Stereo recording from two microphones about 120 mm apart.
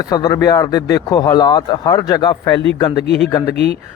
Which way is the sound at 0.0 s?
30° left (ahead or behind).